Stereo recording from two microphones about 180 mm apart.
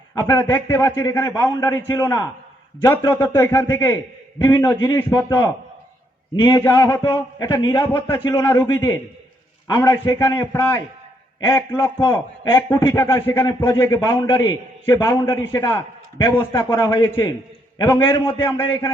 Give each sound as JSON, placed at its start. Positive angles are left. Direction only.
{"t": 0.1, "sound": "a man's voice", "side_deg": 15}